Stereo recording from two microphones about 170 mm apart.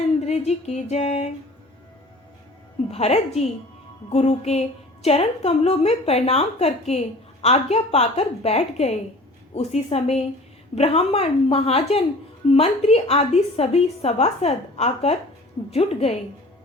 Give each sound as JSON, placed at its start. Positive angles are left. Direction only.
{"t": 0.2, "sound": "a woman's voice", "side_deg": 40}
{"t": 2.9, "sound": "a woman's voice", "side_deg": 40}